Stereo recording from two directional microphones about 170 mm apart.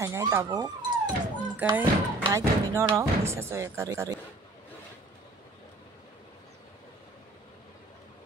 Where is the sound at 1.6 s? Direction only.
10° right (ahead or behind).